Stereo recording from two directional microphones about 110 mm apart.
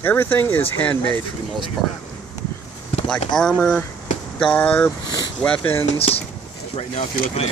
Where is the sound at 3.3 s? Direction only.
5° left (ahead or behind).